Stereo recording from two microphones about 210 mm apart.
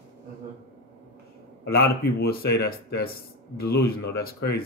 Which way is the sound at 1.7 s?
45° left (ahead or behind).